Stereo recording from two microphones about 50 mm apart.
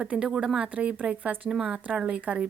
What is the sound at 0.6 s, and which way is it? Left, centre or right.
Speech, right.